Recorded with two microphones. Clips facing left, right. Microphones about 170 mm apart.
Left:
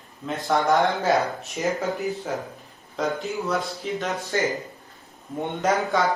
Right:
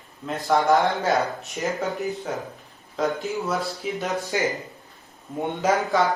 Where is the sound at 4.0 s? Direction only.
15° right (ahead or behind).